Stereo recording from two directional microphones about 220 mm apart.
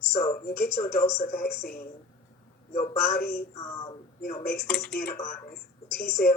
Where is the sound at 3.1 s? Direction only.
45° left (ahead or behind).